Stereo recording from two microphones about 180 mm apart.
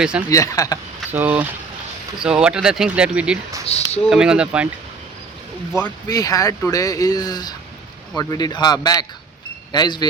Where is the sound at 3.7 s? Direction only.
35° left (ahead or behind).